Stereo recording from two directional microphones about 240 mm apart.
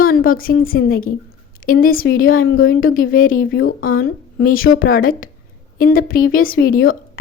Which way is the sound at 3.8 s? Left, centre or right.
Left.